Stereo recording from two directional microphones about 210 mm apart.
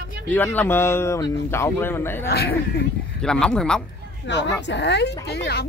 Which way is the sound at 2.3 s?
50° left (ahead or behind).